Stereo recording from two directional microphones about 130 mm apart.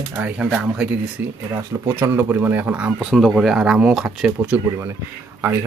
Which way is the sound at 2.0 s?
15° right (ahead or behind).